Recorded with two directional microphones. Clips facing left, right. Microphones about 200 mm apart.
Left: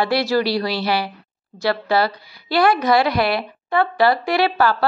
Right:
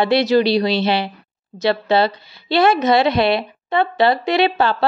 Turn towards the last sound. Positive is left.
turn(degrees=-25)  # may be behind; listen again after turning